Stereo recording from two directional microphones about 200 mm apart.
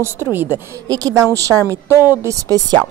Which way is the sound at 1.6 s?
15° left (ahead or behind).